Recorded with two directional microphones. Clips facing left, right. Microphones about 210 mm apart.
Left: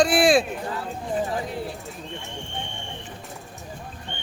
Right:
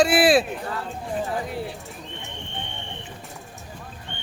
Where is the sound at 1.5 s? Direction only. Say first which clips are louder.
Even; centre (ahead or behind).